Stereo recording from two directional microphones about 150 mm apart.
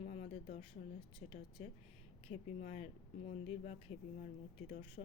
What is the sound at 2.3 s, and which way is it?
A woman's voice, 45° left (ahead or behind).